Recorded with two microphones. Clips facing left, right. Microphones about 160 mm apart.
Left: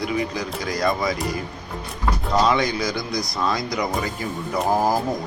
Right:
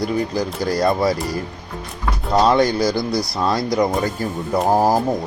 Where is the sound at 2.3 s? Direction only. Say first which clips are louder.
Right 5 dB; 35° right (ahead or behind).